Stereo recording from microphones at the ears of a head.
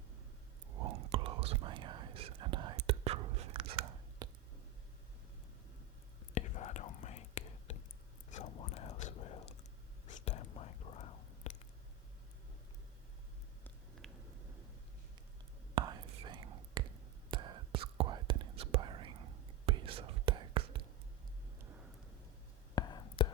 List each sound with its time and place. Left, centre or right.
0.7 s whispering: right
6.3 s whispering: left
15.7 s whispering: right
22.7 s whispering: left